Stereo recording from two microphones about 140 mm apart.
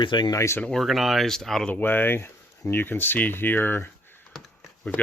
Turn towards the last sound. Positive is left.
turn(degrees=10)  # may be behind; listen again after turning